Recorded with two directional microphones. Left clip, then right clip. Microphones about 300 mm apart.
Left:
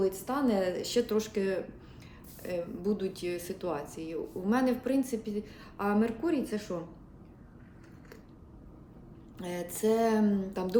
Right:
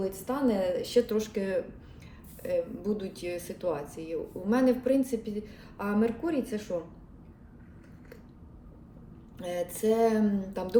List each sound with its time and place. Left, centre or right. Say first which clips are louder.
0.0 s speech: even; centre
9.4 s speech: right 2 dB; centre